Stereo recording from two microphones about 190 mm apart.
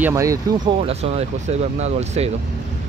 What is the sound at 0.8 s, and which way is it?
Speech, 35° right (ahead or behind).